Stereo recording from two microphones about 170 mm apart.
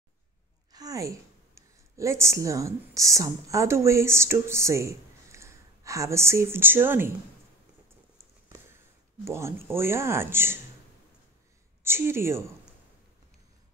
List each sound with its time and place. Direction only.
0.7 s a woman's voice: 20° right (ahead or behind)
9.2 s speech: 15° right (ahead or behind)
11.8 s speech: 15° right (ahead or behind)